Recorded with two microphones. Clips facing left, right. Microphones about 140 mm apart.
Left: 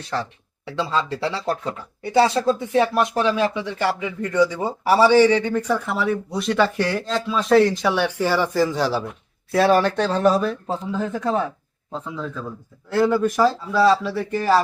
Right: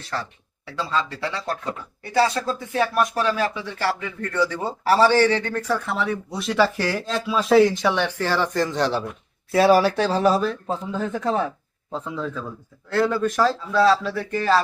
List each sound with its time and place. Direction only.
0.1 s speech: 20° left (ahead or behind); by 14.6 s 5° left (ahead or behind)